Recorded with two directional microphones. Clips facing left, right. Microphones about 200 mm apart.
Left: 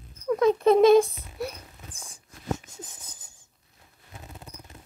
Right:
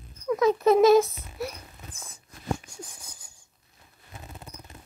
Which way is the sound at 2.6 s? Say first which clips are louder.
Right 1 dB; 10° right (ahead or behind).